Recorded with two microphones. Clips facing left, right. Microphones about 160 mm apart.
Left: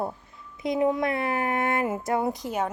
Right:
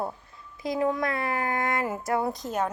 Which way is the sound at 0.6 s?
20° left (ahead or behind).